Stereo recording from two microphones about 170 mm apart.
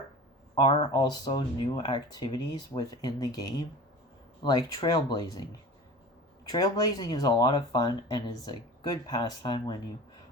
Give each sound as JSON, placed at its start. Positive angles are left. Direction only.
{"t": 0.6, "sound": "speech", "side_deg": 25}
{"t": 6.5, "sound": "speech", "side_deg": 20}